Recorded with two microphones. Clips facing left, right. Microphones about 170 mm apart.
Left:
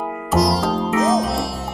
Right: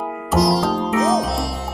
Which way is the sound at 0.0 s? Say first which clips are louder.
Even; centre (ahead or behind).